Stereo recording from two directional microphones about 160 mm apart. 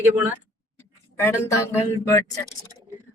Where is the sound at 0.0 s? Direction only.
10° right (ahead or behind).